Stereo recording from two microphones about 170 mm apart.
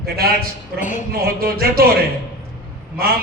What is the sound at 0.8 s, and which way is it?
Speech, 50° left (ahead or behind).